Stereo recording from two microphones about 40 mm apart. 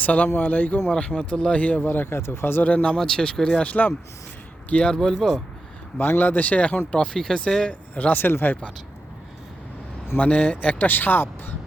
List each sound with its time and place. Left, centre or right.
0.0 s speech: left
0.9 s speech: left
1.8 s speech: left
3.0 s speech: centre
3.6 s speech: left
4.9 s speech: centre
6.0 s speech: left
6.2 s speech: left
6.9 s speech: left
7.7 s speech: left
8.1 s speech: left
10.2 s speech: left
10.8 s speech: left